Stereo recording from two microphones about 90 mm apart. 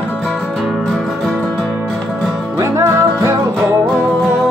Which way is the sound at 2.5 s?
35° right (ahead or behind).